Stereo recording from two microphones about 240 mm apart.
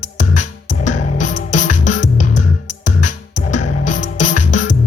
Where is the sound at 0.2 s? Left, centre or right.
Left.